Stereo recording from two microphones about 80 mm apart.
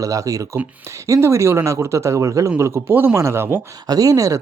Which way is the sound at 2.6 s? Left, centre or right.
Right.